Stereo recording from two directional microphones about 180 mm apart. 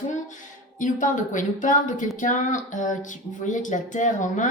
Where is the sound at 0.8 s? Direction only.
45° left (ahead or behind).